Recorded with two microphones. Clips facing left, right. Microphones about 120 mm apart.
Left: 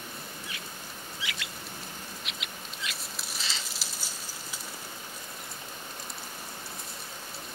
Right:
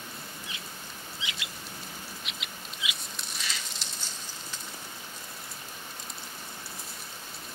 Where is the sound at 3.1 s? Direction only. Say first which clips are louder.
Even; 5° left (ahead or behind).